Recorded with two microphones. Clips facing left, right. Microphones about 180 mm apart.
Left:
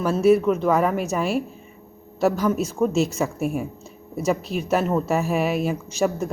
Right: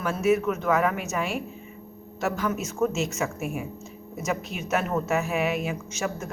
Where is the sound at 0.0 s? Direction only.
35° left (ahead or behind).